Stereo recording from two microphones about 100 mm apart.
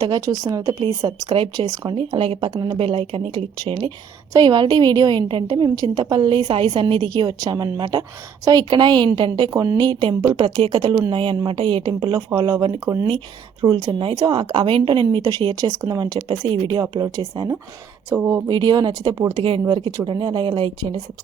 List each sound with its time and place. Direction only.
0.0 s speech: 40° right (ahead or behind)
1.0 s a woman's voice: 50° right (ahead or behind)
2.1 s speech: 65° right (ahead or behind)
2.5 s speech: 40° right (ahead or behind)
2.7 s speech: 65° right (ahead or behind)
4.4 s a woman's voice: 45° right (ahead or behind)
9.5 s speech: 30° right (ahead or behind)
9.7 s a woman's voice: 50° right (ahead or behind)
12.1 s speech: 40° right (ahead or behind)
13.1 s a woman's voice: 50° right (ahead or behind)
15.2 s a woman's voice: 40° right (ahead or behind)
18.1 s speech: 25° right (ahead or behind)
18.4 s a woman's voice: 45° right (ahead or behind)
19.3 s a woman's voice: 55° right (ahead or behind)